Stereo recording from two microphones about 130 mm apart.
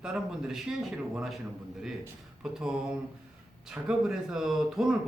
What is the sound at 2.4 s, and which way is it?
Speech, 5° right (ahead or behind).